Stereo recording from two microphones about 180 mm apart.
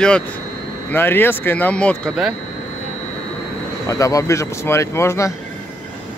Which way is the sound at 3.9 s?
20° left (ahead or behind).